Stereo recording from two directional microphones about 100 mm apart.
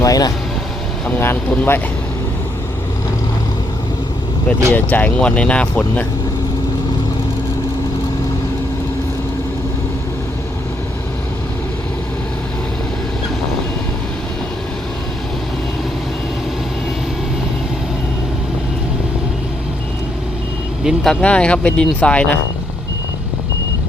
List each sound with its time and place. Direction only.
0.0 s speech: 40° left (ahead or behind)
1.2 s speech: 20° left (ahead or behind)
4.7 s speech: 15° left (ahead or behind)
20.8 s speech: 5° left (ahead or behind)